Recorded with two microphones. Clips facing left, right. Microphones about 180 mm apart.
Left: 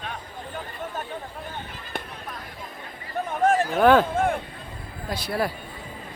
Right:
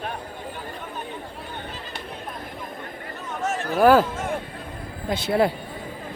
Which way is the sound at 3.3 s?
55° left (ahead or behind).